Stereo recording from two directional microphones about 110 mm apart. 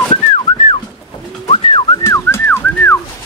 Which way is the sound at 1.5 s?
50° left (ahead or behind).